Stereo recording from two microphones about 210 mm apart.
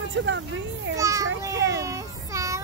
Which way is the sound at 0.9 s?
15° right (ahead or behind).